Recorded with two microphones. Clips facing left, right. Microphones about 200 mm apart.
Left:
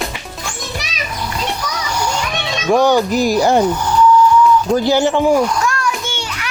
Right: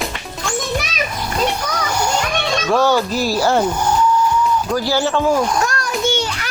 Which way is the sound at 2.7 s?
15° left (ahead or behind).